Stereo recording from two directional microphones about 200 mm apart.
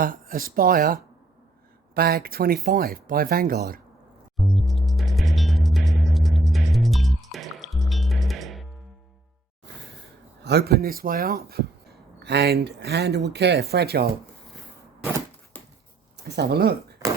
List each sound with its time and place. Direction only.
0.0 s speech: 45° right (ahead or behind)
4.4 s music: centre (ahead or behind)
10.4 s speech: 55° right (ahead or behind)
16.1 s speech: 55° right (ahead or behind)